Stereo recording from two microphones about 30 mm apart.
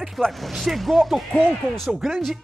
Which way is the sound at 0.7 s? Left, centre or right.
Centre.